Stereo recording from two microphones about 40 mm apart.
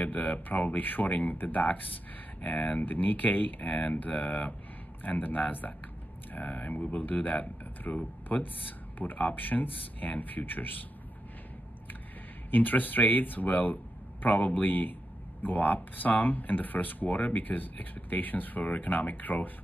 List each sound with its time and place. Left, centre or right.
0.0 s speech: left
5.0 s speech: left
12.4 s speech: left